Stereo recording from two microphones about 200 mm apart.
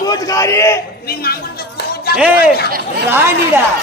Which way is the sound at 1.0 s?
50° left (ahead or behind).